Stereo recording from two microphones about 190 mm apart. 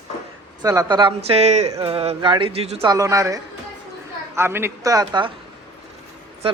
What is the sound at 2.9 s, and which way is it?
Speech, 15° right (ahead or behind).